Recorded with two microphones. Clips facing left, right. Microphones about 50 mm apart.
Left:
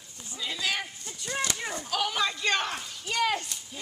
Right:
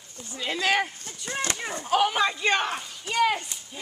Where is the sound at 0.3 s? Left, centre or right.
Right.